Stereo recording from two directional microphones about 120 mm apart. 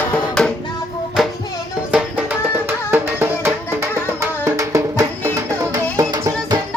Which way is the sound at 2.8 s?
20° right (ahead or behind).